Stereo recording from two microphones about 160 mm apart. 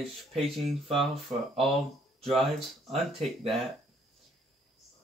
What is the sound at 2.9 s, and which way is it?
Speech, 40° right (ahead or behind).